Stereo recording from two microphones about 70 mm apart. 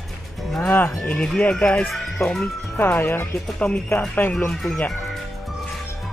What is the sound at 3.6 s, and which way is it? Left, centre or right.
Speech, centre.